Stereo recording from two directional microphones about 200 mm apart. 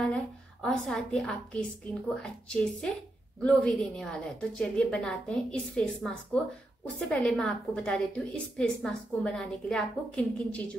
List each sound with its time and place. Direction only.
0.0 s a woman's voice: 5° left (ahead or behind)